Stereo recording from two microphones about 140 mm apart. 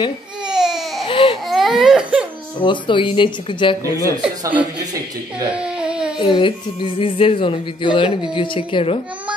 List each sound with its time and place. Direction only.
0.5 s baby cry: 5° right (ahead or behind)
1.0 s baby cry: 40° left (ahead or behind)
1.5 s baby cry: centre (ahead or behind)
2.6 s speech: 35° left (ahead or behind)
4.2 s speech: 10° right (ahead or behind)
5.6 s baby cry: 5° right (ahead or behind)
6.1 s speech: 35° left (ahead or behind)